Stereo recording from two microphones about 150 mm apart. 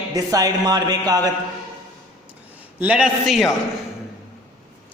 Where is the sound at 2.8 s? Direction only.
10° right (ahead or behind).